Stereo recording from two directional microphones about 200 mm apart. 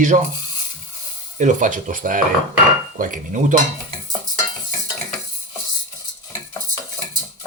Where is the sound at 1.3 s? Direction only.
40° right (ahead or behind).